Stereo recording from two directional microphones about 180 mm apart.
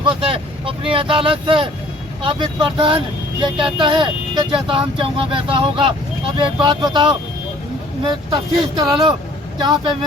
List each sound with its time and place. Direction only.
0.0 s speech: 30° right (ahead or behind)